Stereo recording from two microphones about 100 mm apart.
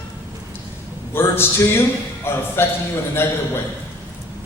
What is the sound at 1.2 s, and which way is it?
A man's voice, 25° left (ahead or behind).